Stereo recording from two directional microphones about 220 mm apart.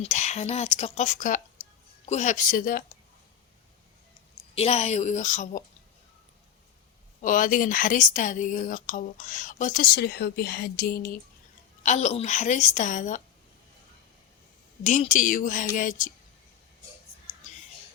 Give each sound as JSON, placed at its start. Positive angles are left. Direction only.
{"t": 0.0, "sound": "a woman's voice", "side_deg": 30}
{"t": 4.5, "sound": "a woman's voice", "side_deg": 30}
{"t": 7.2, "sound": "a woman's voice", "side_deg": 35}
{"t": 11.8, "sound": "a woman's voice", "side_deg": 30}
{"t": 14.8, "sound": "a woman's voice", "side_deg": 35}